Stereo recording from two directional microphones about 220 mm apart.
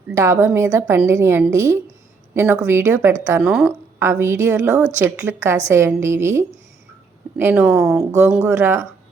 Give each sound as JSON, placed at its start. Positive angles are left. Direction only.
{"t": 0.1, "sound": "a woman's voice", "side_deg": -15}
{"t": 8.0, "sound": "a woman's voice", "side_deg": -10}